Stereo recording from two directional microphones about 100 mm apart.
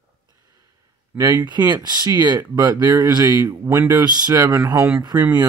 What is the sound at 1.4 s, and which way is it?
Speech, 45° right (ahead or behind).